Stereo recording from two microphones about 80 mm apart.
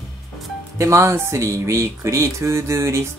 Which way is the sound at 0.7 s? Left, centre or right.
Right.